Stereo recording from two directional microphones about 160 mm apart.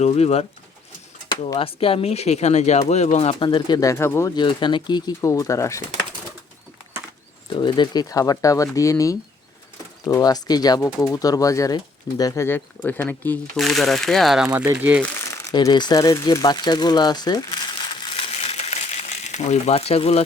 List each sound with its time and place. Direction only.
0.0 s speech: 40° left (ahead or behind)
1.5 s speech: 35° left (ahead or behind); by 4.3 s 15° left (ahead or behind)
4.4 s speech: 30° left (ahead or behind)
7.5 s speech: 30° left (ahead or behind); by 13.4 s 10° left (ahead or behind)
13.6 s speech: centre (ahead or behind)
15.4 s speech: 25° left (ahead or behind)
18.1 s crumpling: 35° left (ahead or behind)